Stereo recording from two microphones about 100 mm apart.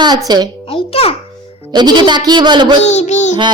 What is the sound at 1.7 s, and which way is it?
Speech, 45° right (ahead or behind).